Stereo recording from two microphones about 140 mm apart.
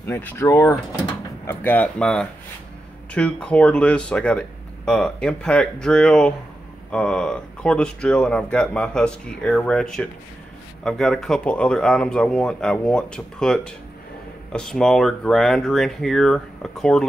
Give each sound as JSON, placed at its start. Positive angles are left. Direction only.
{"t": 0.0, "sound": "speech", "side_deg": 20}